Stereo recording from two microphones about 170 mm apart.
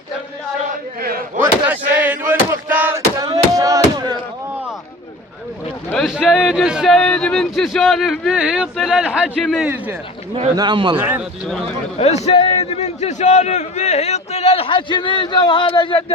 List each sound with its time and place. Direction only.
1.6 s a sound: 10° right (ahead or behind)
6.1 s speech: 5° right (ahead or behind)
10.5 s speech: 25° right (ahead or behind)
10.9 s speech: 10° right (ahead or behind)
11.9 s a man's voice: 40° left (ahead or behind)